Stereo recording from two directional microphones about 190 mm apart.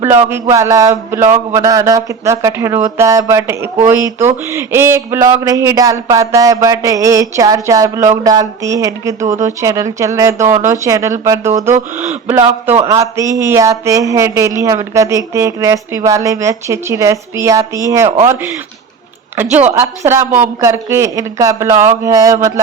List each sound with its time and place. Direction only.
0.3 s speech: 15° right (ahead or behind)
19.4 s speech: 10° right (ahead or behind)